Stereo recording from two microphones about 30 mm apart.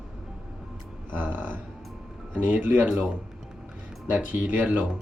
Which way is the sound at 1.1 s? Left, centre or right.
Right.